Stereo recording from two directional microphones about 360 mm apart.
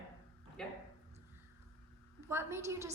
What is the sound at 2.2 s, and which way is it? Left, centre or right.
Speech, centre.